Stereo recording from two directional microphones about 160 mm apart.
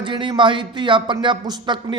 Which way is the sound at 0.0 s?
30° right (ahead or behind).